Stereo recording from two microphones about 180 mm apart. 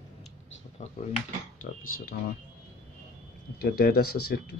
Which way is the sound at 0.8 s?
40° left (ahead or behind).